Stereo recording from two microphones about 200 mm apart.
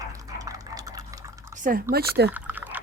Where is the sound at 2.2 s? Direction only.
10° right (ahead or behind).